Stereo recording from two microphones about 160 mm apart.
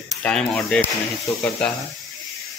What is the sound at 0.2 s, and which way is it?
Speech, 5° left (ahead or behind).